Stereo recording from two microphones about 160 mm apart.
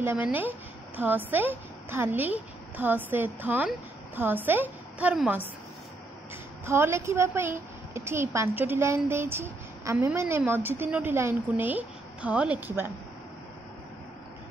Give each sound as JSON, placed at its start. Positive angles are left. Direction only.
{"t": 0.0, "sound": "a woman's voice", "side_deg": -10}
{"t": 6.6, "sound": "a woman's voice", "side_deg": -15}